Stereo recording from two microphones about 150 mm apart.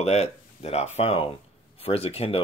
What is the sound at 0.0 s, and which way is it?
Speech, 45° left (ahead or behind).